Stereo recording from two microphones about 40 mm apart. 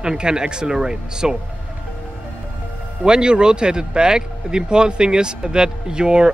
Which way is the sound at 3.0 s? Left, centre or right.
Right.